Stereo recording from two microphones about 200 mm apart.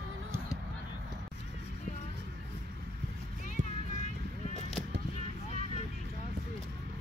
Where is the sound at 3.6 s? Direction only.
40° right (ahead or behind).